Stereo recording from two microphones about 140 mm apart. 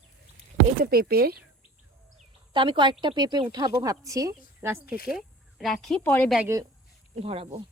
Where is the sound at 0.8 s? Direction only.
90° right.